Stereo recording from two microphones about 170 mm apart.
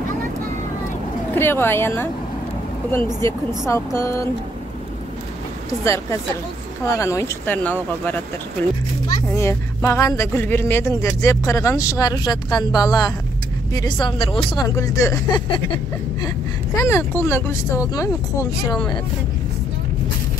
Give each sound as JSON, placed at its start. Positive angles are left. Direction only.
{"t": 1.3, "sound": "speech", "side_deg": 15}
{"t": 3.2, "sound": "speech", "side_deg": 15}
{"t": 6.8, "sound": "speech", "side_deg": 20}
{"t": 14.8, "sound": "speech", "side_deg": 20}
{"t": 16.7, "sound": "speech", "side_deg": 15}